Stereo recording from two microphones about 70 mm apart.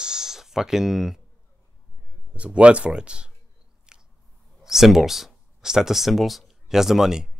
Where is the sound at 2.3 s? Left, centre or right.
Centre.